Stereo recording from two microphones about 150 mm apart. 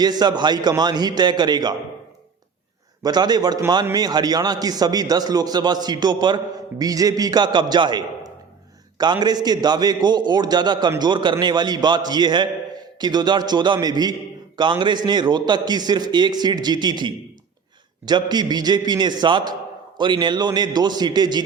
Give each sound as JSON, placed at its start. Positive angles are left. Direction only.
{"t": 0.0, "sound": "a man's voice", "side_deg": -25}
{"t": 3.0, "sound": "a man's voice", "side_deg": -25}